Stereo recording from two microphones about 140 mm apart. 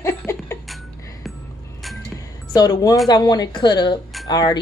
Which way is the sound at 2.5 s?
25° left (ahead or behind).